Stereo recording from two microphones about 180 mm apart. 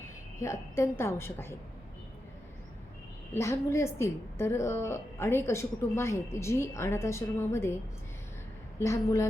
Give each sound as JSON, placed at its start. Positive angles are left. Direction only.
{"t": 0.3, "sound": "a woman's voice", "side_deg": 15}
{"t": 3.3, "sound": "a woman's voice", "side_deg": 15}
{"t": 8.8, "sound": "a woman's voice", "side_deg": 15}